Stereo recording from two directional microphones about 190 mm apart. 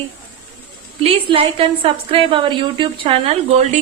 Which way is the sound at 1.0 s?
30° right (ahead or behind).